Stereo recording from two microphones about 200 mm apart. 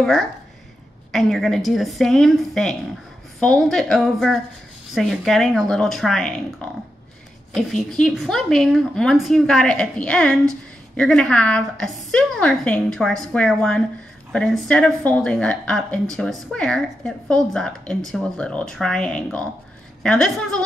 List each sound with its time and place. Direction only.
0.0 s a woman's voice: centre (ahead or behind)